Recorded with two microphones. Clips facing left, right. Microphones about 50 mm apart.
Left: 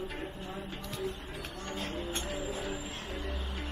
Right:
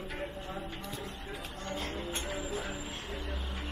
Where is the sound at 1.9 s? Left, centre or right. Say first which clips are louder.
Left 1 dB; right.